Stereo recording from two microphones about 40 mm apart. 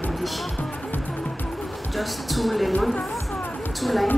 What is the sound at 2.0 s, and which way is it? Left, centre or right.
Speech, centre.